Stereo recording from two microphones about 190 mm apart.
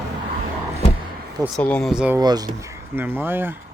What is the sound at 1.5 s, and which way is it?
Speech, 5° left (ahead or behind).